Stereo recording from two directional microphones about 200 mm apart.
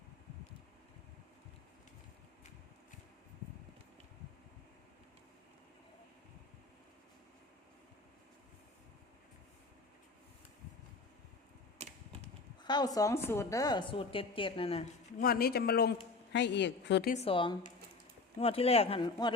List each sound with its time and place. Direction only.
11.8 s typewriter: 30° right (ahead or behind)
12.6 s a woman's voice: 20° left (ahead or behind)
15.2 s a woman's voice: 50° left (ahead or behind)
17.1 s a woman's voice: 30° left (ahead or behind)